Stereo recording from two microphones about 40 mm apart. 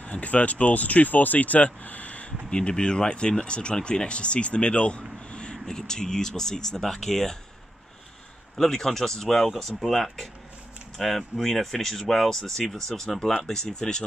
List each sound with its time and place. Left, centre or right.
0.0 s speech: left
2.5 s speech: left
8.5 s speech: centre